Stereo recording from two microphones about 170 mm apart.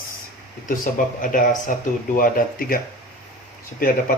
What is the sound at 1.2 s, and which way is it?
A man's voice, 50° left (ahead or behind).